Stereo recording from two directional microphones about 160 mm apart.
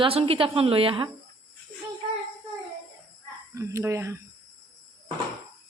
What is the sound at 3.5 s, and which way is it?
Speech, 20° right (ahead or behind).